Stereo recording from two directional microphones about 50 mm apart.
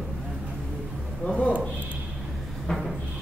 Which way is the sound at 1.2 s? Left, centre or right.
Left.